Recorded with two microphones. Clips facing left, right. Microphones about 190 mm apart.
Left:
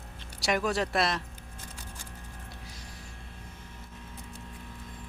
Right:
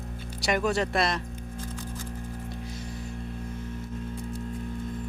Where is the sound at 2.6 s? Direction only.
55° right (ahead or behind).